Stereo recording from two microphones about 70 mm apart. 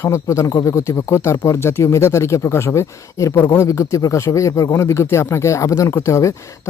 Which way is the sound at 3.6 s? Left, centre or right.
Left.